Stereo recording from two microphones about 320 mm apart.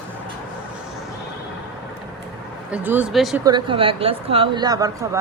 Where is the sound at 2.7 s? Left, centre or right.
Centre.